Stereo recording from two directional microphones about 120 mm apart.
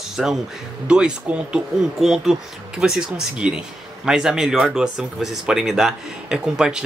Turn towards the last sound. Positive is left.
turn(degrees=-5)  # may be behind; listen again after turning